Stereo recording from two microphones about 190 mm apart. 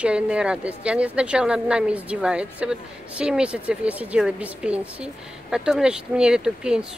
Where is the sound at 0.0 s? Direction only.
5° right (ahead or behind).